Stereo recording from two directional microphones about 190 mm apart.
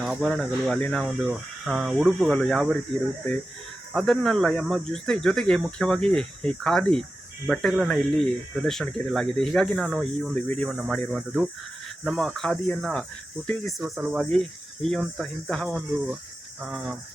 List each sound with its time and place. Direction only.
0.0 s speech: centre (ahead or behind)
3.9 s speech: centre (ahead or behind)